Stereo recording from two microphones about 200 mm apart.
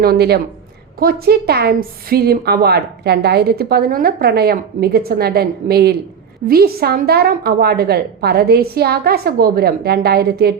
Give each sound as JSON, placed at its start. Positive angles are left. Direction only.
{"t": 0.0, "sound": "a woman's voice", "side_deg": -50}